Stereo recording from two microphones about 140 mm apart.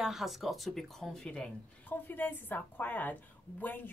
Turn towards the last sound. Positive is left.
turn(degrees=10)  # may be behind; listen again after turning